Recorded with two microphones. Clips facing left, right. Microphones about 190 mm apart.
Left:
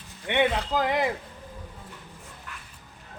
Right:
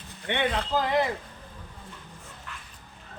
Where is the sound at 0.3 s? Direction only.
15° left (ahead or behind).